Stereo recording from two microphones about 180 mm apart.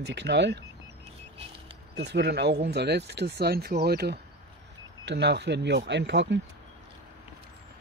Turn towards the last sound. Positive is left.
turn(degrees=-80)